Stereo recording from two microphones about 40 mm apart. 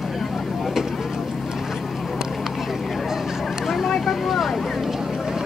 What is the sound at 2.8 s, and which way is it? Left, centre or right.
Vehicle, centre.